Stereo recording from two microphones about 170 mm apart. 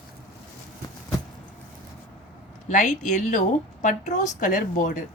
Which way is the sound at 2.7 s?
45° left (ahead or behind).